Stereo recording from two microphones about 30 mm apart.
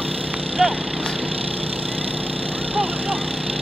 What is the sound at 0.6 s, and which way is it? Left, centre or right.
Speech, right.